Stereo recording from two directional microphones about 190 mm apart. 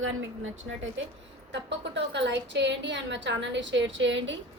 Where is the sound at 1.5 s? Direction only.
65° right (ahead or behind).